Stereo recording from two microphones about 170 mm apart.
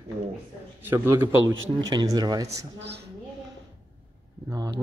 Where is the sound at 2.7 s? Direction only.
90° right.